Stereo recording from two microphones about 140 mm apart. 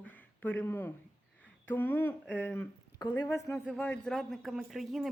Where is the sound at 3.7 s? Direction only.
10° left (ahead or behind).